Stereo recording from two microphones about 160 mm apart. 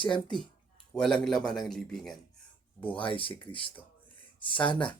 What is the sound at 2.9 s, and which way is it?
Speech, 35° left (ahead or behind).